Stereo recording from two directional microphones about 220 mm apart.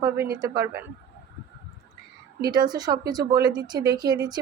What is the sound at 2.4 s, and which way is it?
Speech, 20° right (ahead or behind).